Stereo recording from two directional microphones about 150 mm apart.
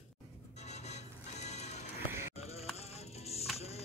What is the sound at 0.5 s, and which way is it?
Music, 50° left (ahead or behind).